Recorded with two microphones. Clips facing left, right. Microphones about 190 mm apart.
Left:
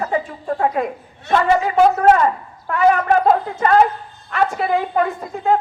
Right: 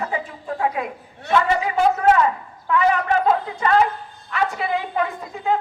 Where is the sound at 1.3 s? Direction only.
45° left (ahead or behind).